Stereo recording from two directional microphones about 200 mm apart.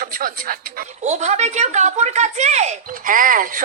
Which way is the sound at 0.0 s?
45° right (ahead or behind).